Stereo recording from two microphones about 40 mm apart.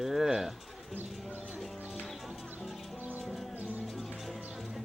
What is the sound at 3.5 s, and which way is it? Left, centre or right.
Music, right.